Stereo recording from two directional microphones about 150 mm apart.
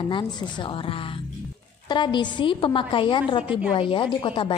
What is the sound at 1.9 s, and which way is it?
A woman's voice, 30° left (ahead or behind).